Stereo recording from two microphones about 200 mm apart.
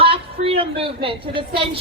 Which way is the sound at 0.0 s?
30° right (ahead or behind).